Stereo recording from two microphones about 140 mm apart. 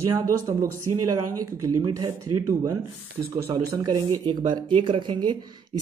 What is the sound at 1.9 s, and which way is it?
Speech, 25° right (ahead or behind).